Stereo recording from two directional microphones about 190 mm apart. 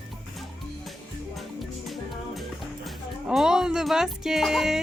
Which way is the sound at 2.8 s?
Centre (ahead or behind).